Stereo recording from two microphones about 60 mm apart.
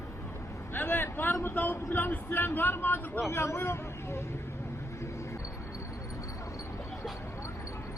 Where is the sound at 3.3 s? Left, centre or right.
Left.